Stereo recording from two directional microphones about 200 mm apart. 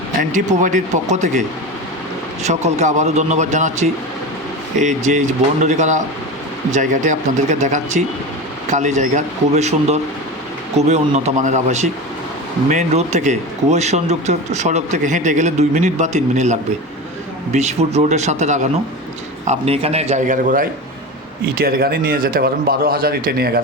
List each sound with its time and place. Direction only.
0.6 s speech: 35° right (ahead or behind)